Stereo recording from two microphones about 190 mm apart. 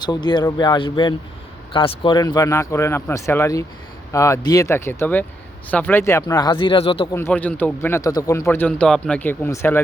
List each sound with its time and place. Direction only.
0.0 s a man's voice: 25° left (ahead or behind)
7.1 s a man's voice: 10° left (ahead or behind)